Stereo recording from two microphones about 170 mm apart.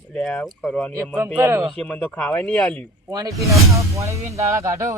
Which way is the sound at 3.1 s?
20° right (ahead or behind).